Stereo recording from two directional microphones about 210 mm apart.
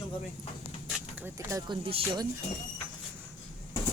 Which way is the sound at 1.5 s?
20° right (ahead or behind).